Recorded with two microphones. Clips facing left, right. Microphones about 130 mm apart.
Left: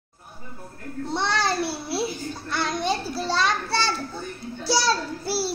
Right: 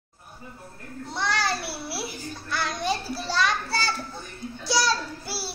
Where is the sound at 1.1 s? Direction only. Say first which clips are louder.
Left 3 dB; 25° left (ahead or behind).